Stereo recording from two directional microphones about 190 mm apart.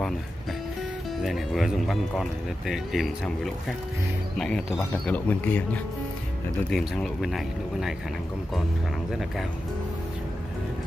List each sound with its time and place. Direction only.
1.2 s speech: centre (ahead or behind)
6.7 s speech: centre (ahead or behind)